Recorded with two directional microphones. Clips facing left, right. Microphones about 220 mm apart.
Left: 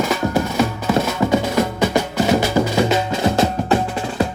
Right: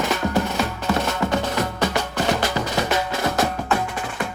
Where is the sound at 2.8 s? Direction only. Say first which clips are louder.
Left 5 dB; 25° left (ahead or behind).